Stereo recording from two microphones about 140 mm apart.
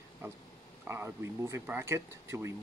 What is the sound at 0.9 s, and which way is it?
Speech, 15° right (ahead or behind).